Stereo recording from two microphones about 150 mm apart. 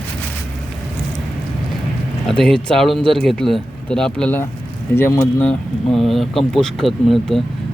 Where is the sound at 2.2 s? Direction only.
5° left (ahead or behind).